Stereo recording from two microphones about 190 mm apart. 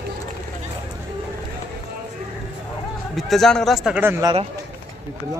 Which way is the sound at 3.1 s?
Centre (ahead or behind).